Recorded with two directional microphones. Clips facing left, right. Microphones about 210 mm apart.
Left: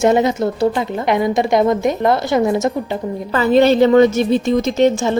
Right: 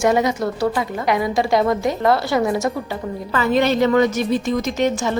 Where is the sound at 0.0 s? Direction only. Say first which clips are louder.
Left 4 dB; 25° left (ahead or behind).